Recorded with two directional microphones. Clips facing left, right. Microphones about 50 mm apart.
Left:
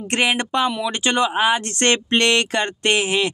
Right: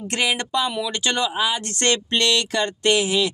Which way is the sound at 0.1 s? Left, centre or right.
Left.